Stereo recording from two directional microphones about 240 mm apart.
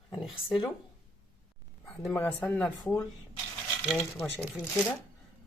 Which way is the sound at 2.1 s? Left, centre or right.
Centre.